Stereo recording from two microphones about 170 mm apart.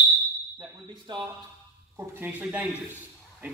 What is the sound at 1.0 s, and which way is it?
Speech, 30° right (ahead or behind).